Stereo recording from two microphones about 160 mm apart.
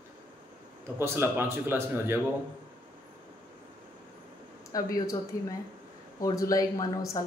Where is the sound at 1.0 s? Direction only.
15° right (ahead or behind).